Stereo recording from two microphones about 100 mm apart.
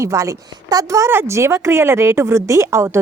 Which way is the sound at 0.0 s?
30° right (ahead or behind).